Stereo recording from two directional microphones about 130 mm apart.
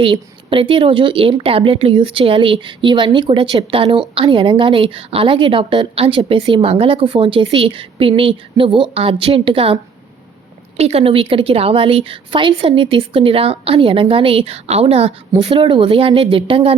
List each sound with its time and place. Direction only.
0.0 s a woman's voice: 40° right (ahead or behind)
10.8 s a woman's voice: 50° right (ahead or behind)